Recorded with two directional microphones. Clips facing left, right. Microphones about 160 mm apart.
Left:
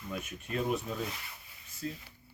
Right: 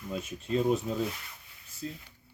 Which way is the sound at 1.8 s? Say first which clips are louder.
Even; 25° right (ahead or behind).